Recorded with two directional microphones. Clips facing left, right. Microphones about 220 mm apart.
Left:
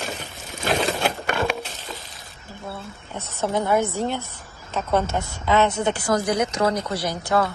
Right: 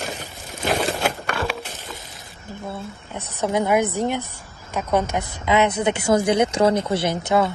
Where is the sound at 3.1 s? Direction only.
15° right (ahead or behind).